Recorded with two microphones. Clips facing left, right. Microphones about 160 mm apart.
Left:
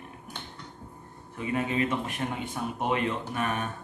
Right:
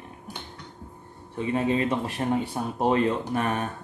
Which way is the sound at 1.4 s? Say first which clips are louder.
Right 4 dB; 30° right (ahead or behind).